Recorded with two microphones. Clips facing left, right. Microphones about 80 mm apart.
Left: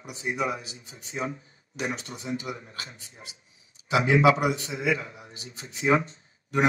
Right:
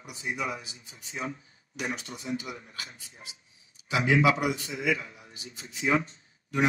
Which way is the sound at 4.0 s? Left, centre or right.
Left.